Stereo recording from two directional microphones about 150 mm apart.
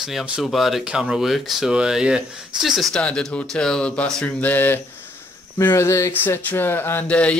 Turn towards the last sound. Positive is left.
turn(degrees=10)  # may be behind; listen again after turning